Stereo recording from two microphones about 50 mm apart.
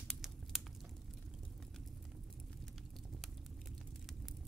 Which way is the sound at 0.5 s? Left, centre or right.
Centre.